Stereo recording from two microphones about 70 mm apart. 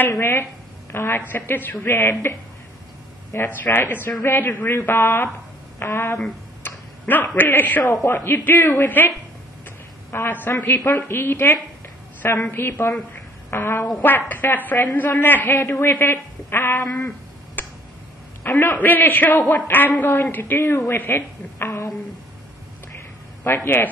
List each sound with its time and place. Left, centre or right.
0.2 s a woman's voice: left
3.4 s a man's voice: left
10.2 s a man's voice: left
17.6 s tick: left
18.4 s a man's voice: left
20.6 s speech: left
20.9 s a woman's voice: left
23.4 s a man's voice: left